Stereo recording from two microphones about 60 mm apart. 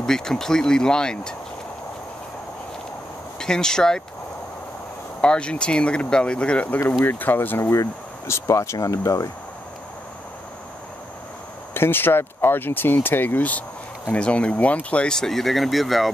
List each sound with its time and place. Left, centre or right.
0.0 s speech: centre
3.3 s speech: centre
5.2 s speech: centre
7.1 s speech: left
8.5 s speech: left
11.7 s speech: left
15.1 s speech: centre